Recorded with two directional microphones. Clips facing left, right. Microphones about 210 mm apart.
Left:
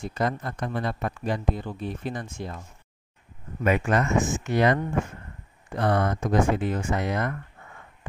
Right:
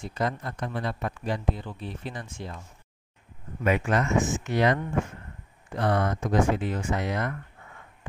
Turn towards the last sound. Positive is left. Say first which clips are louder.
# left 2 dB
turn(degrees=50)  # may be behind; listen again after turning